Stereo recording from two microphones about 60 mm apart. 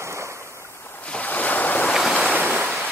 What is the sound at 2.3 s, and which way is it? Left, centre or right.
Waves, right.